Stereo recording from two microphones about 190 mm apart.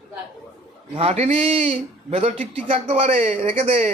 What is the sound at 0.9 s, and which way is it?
Speech, 30° right (ahead or behind).